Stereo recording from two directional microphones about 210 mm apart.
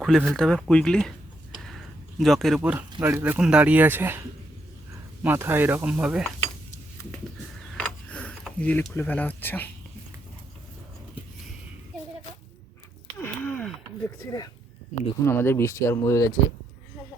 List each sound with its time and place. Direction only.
0.0 s speech: centre (ahead or behind)
2.1 s speech: centre (ahead or behind)
2.6 s speech: 10° right (ahead or behind)
5.2 s speech: 10° right (ahead or behind)
7.8 s a sound: 5° left (ahead or behind)
13.1 s a sound: 10° left (ahead or behind)
14.3 s speech: 20° left (ahead or behind)